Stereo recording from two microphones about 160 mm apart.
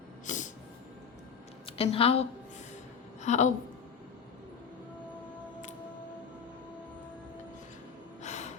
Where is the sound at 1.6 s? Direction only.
40° left (ahead or behind).